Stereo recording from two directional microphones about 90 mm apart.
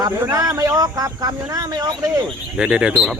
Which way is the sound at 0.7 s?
40° right (ahead or behind).